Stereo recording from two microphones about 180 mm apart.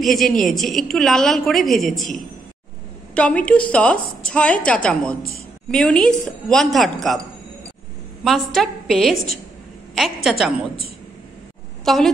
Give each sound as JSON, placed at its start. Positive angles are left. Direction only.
{"t": 0.0, "sound": "a woman's voice", "side_deg": 0}
{"t": 3.2, "sound": "a woman's voice", "side_deg": 5}
{"t": 8.2, "sound": "a woman's voice", "side_deg": 0}
{"t": 11.8, "sound": "a woman's voice", "side_deg": 0}